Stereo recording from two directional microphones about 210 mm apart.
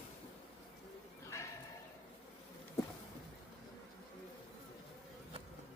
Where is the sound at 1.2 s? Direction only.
15° left (ahead or behind).